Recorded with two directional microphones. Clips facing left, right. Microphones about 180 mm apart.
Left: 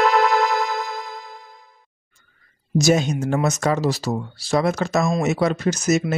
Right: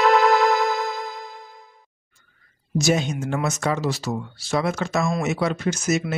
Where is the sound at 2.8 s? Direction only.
40° left (ahead or behind).